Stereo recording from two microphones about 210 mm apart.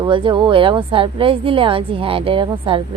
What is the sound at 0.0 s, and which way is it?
Speech, 25° right (ahead or behind).